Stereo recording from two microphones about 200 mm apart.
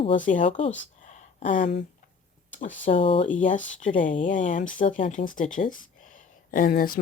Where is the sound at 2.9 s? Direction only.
25° left (ahead or behind).